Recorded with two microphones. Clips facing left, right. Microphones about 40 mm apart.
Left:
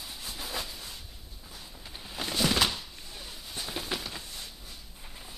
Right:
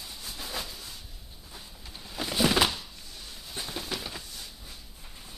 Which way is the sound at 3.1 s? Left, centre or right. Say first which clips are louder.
Left 2 dB; centre.